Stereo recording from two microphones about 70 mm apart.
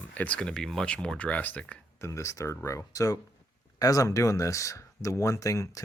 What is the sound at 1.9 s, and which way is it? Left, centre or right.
Speech, left.